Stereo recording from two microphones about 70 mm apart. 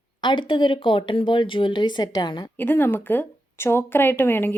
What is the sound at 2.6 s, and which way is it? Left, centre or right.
A woman's voice, left.